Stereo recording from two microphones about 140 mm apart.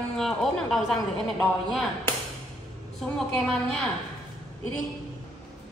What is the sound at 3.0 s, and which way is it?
Speech, 5° left (ahead or behind).